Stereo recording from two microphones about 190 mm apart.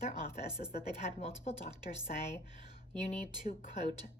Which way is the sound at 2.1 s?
45° left (ahead or behind).